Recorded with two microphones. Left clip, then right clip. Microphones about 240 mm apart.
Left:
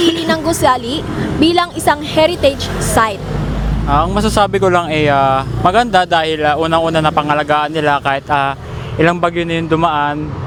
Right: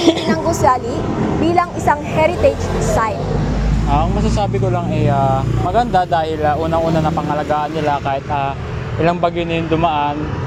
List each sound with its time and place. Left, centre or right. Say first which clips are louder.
0.3 s a sound: left 2 dB; left
1.5 s a woman's voice: left 2 dB; left
3.9 s speech: left 6 dB; left